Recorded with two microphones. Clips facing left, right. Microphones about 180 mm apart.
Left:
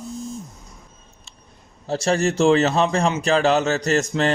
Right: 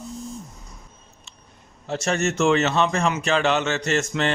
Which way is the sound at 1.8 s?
35° left (ahead or behind).